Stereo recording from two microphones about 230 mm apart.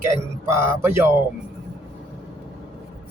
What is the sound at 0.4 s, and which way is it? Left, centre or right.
Speech, centre.